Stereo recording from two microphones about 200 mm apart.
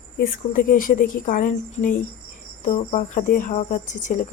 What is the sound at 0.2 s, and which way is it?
A woman's voice, 45° left (ahead or behind).